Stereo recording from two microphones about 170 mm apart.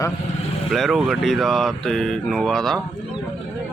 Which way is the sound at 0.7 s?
Centre (ahead or behind).